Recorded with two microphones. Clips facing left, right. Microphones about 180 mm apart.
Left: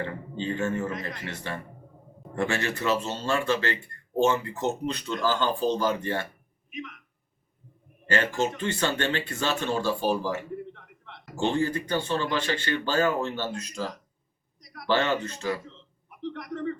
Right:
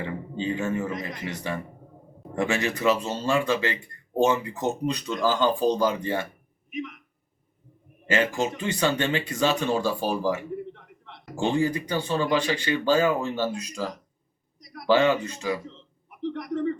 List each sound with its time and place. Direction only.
0.0 s speech: 10° right (ahead or behind)
8.0 s speech: 15° right (ahead or behind)
14.8 s speech: 15° right (ahead or behind)